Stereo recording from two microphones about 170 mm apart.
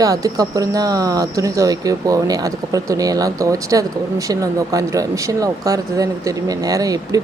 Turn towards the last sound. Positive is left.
turn(degrees=-20)  # may be behind; listen again after turning